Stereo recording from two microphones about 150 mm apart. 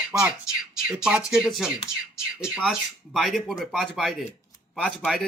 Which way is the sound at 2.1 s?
20° left (ahead or behind).